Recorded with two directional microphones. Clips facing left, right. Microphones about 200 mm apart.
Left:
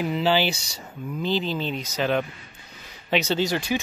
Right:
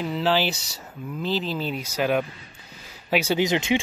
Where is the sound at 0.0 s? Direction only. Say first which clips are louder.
Left 1 dB; centre (ahead or behind).